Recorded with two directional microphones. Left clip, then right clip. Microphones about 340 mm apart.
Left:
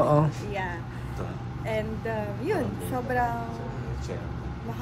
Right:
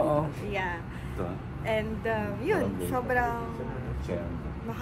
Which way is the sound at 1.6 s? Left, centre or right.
Centre.